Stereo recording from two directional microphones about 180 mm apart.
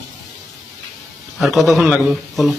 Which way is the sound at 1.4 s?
Centre (ahead or behind).